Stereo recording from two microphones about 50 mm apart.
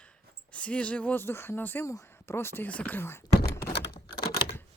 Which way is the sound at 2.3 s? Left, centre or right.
Left.